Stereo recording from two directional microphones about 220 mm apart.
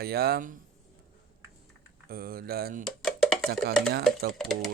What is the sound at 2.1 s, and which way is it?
Speech, 45° right (ahead or behind).